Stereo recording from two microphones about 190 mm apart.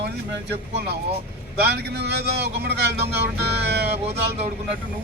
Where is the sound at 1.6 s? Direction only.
60° right (ahead or behind).